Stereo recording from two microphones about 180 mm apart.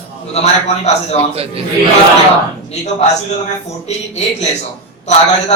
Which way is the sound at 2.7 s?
40° left (ahead or behind).